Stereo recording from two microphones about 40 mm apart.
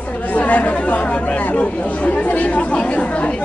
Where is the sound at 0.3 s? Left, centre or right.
Left.